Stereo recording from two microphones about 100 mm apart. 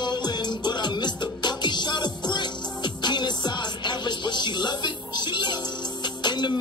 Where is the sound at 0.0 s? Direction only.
45° left (ahead or behind).